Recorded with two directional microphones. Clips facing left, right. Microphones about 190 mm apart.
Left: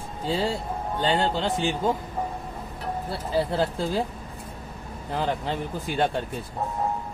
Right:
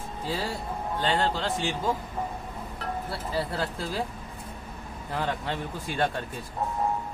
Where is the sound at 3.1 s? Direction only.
25° left (ahead or behind).